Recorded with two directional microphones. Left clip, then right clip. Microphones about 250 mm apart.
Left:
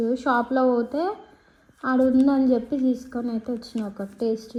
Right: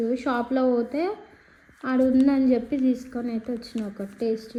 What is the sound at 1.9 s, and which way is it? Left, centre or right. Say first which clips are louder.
Speech: left 1 dB; centre.